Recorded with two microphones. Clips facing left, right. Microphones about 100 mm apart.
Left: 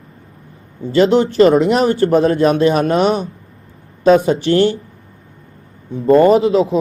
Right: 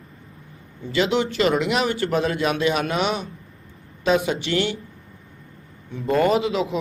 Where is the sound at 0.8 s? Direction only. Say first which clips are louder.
Left 9 dB; 35° left (ahead or behind).